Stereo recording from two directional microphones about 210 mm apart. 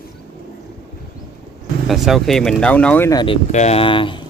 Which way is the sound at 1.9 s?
Centre (ahead or behind).